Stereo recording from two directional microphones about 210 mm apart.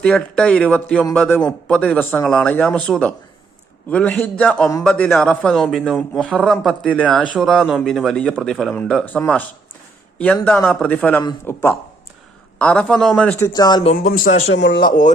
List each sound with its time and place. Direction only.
0.0 s a man's voice: 5° left (ahead or behind); by 13.9 s 20° left (ahead or behind)
14.1 s speech: 35° left (ahead or behind)
14.5 s speech: 55° left (ahead or behind); by 15.1 s 40° left (ahead or behind)